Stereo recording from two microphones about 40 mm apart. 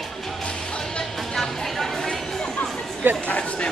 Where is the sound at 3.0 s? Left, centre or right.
Right.